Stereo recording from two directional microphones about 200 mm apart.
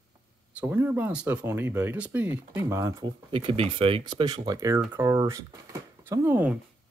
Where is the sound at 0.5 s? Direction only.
10° right (ahead or behind).